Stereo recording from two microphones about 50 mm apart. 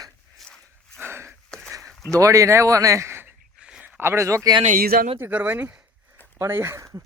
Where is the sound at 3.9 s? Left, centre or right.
Right.